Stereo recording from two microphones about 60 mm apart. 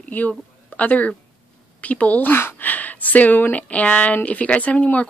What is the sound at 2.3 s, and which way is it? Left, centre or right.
Speech, left.